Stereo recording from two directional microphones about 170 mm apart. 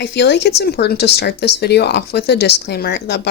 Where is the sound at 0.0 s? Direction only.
85° left.